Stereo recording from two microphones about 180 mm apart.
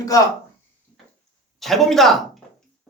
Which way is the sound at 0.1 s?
20° left (ahead or behind).